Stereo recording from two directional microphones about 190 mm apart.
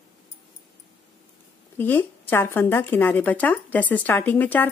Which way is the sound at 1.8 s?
10° left (ahead or behind).